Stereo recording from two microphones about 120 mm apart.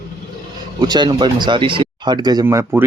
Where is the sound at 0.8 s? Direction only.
40° right (ahead or behind).